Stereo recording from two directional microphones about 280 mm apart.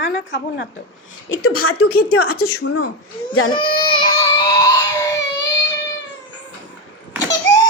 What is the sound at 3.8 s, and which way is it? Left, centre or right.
Baby cry, centre.